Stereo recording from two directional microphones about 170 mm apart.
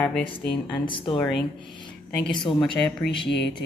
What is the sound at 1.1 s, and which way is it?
Speech, centre (ahead or behind).